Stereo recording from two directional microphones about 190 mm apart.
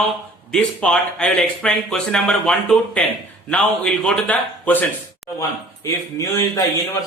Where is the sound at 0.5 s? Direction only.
5° left (ahead or behind).